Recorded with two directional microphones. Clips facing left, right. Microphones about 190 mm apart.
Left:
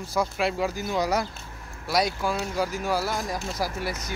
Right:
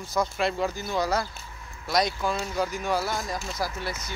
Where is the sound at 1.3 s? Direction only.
45° left (ahead or behind).